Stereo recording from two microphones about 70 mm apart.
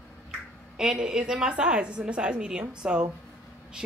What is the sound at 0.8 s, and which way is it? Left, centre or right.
A woman's voice, centre.